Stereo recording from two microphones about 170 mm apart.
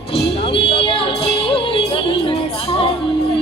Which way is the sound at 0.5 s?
30° left (ahead or behind).